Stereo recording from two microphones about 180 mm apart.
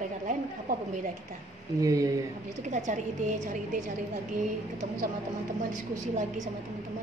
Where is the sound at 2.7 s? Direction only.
45° right (ahead or behind).